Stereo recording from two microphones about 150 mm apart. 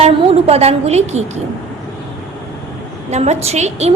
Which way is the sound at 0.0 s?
45° right (ahead or behind).